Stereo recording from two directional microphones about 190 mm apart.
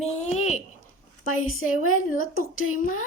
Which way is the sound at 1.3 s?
90° left.